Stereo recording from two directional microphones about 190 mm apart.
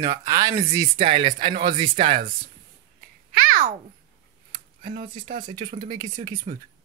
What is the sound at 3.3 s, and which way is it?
Babbling, 50° right (ahead or behind).